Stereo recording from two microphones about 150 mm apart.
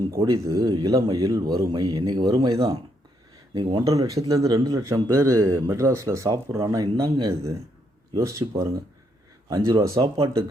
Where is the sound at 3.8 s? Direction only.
20° right (ahead or behind).